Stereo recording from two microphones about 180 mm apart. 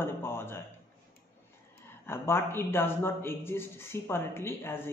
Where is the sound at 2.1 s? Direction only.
15° left (ahead or behind).